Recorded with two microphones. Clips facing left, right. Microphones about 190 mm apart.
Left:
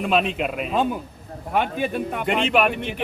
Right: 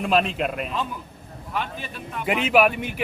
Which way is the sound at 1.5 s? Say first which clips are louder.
Left 8 dB; 60° left (ahead or behind).